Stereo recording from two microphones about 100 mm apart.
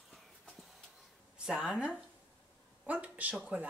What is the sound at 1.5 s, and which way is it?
Speech, 5° right (ahead or behind).